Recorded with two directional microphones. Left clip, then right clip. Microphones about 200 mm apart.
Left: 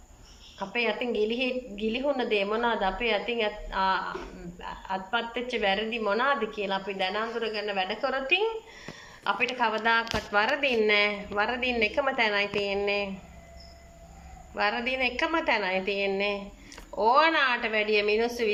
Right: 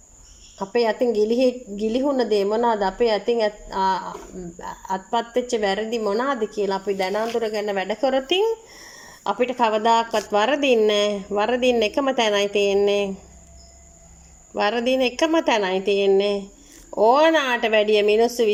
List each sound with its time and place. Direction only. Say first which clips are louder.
0.6 s a woman's voice: right 8 dB; 45° right (ahead or behind)
14.5 s a woman's voice: right 7 dB; 45° right (ahead or behind)